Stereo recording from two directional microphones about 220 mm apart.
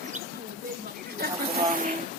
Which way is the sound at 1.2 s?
40° right (ahead or behind).